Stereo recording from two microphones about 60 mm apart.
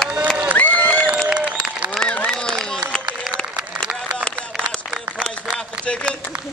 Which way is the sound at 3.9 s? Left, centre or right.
Centre.